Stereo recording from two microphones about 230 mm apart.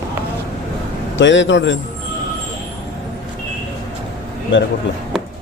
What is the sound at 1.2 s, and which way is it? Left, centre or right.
Speech, left.